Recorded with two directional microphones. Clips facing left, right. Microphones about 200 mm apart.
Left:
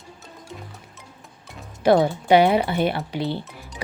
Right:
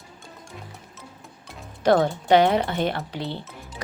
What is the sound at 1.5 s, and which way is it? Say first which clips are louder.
Speech: left 2 dB; 10° left (ahead or behind).